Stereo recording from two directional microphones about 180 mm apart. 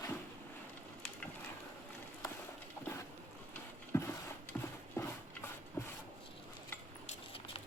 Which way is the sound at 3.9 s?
15° left (ahead or behind).